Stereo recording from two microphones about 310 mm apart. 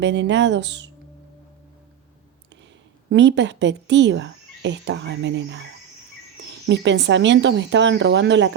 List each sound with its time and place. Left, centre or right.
0.0 s speech: right
3.1 s speech: right
6.7 s speech: right